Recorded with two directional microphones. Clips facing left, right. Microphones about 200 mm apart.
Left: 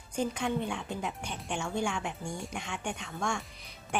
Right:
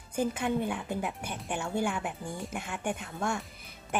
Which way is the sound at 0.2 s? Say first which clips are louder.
Right 2 dB; 5° right (ahead or behind).